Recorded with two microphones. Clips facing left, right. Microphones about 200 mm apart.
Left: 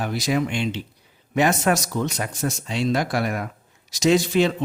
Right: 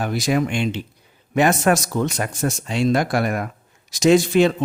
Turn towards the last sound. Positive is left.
turn(degrees=-50)  # may be behind; listen again after turning